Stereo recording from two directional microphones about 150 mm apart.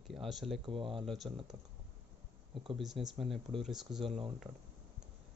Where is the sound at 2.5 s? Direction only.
35° right (ahead or behind).